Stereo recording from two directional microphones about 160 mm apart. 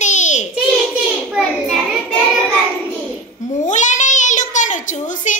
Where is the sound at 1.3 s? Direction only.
Centre (ahead or behind).